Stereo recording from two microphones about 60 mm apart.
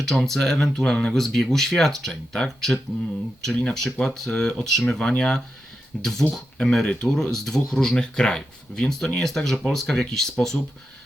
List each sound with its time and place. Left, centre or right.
0.0 s speech: centre